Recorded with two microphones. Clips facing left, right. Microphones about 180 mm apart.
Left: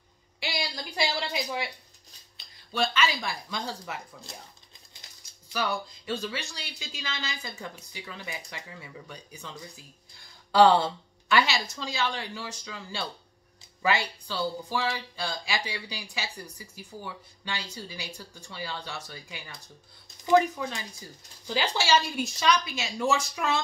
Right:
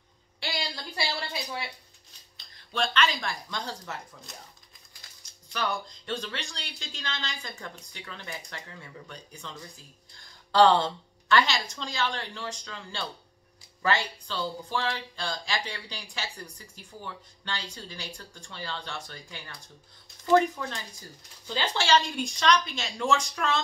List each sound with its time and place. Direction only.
0.4 s a sound: 10° left (ahead or behind)
2.7 s speech: 5° left (ahead or behind)
5.5 s speech: 5° left (ahead or behind)
10.5 s speech: 10° left (ahead or behind)